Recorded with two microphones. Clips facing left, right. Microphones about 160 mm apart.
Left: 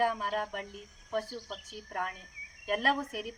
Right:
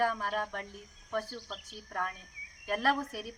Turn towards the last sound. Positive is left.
turn(degrees=20)  # may be behind; listen again after turning